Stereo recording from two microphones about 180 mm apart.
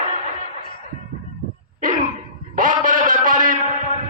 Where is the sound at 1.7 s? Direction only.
45° right (ahead or behind).